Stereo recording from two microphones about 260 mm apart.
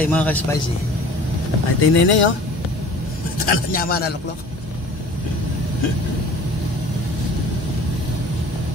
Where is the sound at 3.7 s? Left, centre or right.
Left.